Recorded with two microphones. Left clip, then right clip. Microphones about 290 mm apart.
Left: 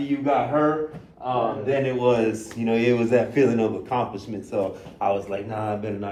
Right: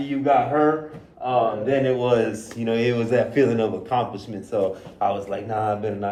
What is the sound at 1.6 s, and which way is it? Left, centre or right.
A man's voice, centre.